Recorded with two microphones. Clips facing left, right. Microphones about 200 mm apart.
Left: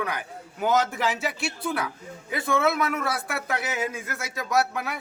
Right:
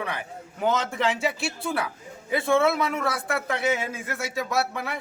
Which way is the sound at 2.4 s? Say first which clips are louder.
Right 2 dB; 30° right (ahead or behind).